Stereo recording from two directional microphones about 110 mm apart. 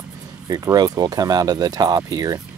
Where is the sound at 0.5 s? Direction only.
35° right (ahead or behind).